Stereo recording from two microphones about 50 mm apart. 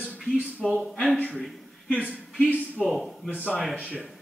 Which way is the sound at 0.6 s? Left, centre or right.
Centre.